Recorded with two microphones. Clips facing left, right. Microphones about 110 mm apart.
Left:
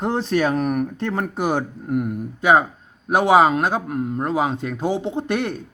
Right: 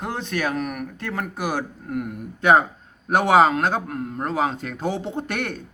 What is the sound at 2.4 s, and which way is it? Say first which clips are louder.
A man's voice: even; 10° left (ahead or behind).